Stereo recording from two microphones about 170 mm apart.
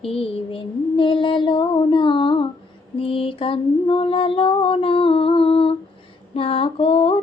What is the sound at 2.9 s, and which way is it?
Female singing, 35° left (ahead or behind).